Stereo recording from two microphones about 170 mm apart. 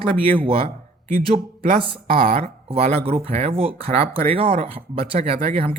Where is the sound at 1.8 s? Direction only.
30° right (ahead or behind).